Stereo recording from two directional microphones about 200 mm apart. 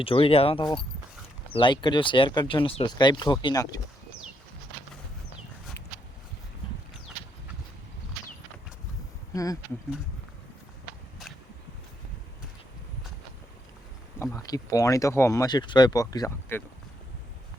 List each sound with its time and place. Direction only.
0.0 s speech: 25° left (ahead or behind)
9.3 s speech: 15° left (ahead or behind)
14.2 s speech: 15° left (ahead or behind)